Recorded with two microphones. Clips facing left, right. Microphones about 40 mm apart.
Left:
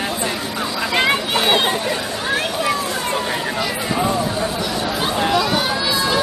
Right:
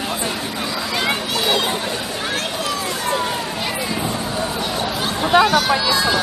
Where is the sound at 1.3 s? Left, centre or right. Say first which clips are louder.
Left 2 dB; left.